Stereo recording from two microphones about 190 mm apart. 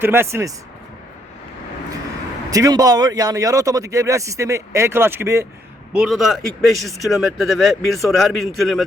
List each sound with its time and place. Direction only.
0.0 s speech: 10° right (ahead or behind)
2.5 s speech: 20° right (ahead or behind)
5.9 s speech: 5° right (ahead or behind)